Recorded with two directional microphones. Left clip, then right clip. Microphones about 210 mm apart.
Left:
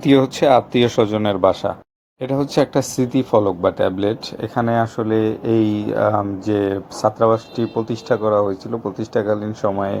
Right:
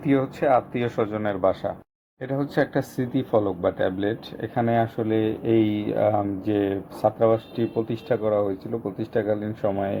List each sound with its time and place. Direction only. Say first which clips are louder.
0.1 s speech: left 7 dB; 40° left (ahead or behind); by 10.0 s 10° left (ahead or behind)